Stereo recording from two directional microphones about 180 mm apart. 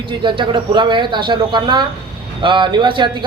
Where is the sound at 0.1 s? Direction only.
25° right (ahead or behind).